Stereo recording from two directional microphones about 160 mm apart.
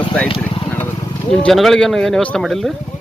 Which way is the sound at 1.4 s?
Centre (ahead or behind).